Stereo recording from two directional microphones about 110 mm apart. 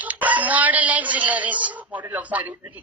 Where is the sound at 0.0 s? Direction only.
15° right (ahead or behind).